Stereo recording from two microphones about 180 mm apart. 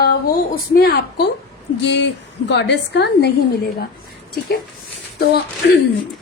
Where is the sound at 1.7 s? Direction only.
75° left (ahead or behind).